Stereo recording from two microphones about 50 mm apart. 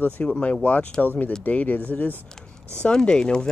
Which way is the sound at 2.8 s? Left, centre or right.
Centre.